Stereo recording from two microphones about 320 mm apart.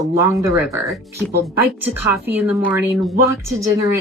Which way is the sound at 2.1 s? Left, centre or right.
Centre.